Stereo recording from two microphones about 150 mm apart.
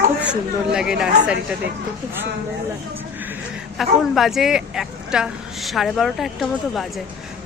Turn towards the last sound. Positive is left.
turn(degrees=0)  # may be behind; listen again after turning